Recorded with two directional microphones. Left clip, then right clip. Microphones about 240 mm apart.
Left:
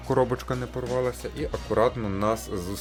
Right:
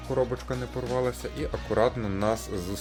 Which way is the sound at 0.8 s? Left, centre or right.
Centre.